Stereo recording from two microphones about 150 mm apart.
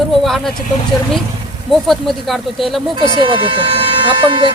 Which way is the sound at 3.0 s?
35° right (ahead or behind).